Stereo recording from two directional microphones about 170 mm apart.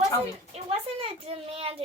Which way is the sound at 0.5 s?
35° right (ahead or behind).